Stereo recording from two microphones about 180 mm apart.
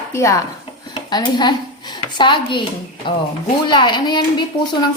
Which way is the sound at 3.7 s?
25° left (ahead or behind).